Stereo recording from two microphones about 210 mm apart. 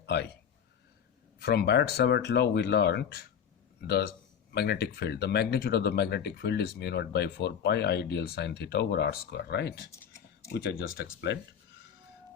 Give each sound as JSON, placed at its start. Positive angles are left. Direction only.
{"t": 0.0, "sound": "speech", "side_deg": 55}
{"t": 1.4, "sound": "speech", "side_deg": 50}
{"t": 9.9, "sound": "a sound", "side_deg": 15}
{"t": 10.5, "sound": "speech", "side_deg": 55}